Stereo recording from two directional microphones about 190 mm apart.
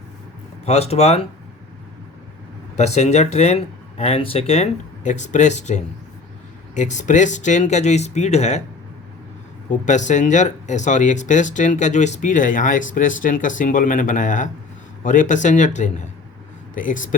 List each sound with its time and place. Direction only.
0.6 s speech: 35° left (ahead or behind)
2.7 s speech: 35° left (ahead or behind)
9.6 s speech: 40° left (ahead or behind)